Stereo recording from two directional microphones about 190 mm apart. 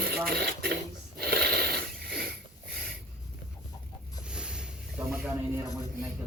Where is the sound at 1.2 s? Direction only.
55° right (ahead or behind).